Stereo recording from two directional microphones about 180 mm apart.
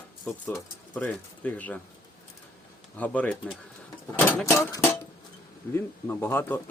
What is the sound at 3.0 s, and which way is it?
Speech, 5° left (ahead or behind).